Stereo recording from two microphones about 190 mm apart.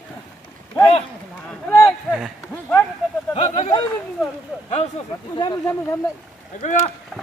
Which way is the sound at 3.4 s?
40° left (ahead or behind).